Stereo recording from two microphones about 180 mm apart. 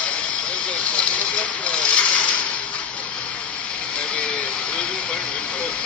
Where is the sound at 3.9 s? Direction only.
5° left (ahead or behind).